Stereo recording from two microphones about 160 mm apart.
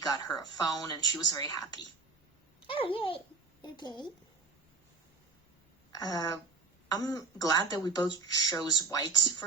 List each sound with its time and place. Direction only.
0.0 s speech: 25° left (ahead or behind)
2.6 s a child's voice: 35° left (ahead or behind)
5.9 s speech: 25° left (ahead or behind)